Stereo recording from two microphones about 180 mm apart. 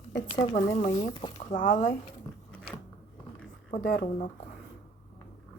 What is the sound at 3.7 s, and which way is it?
Speech, 75° left (ahead or behind).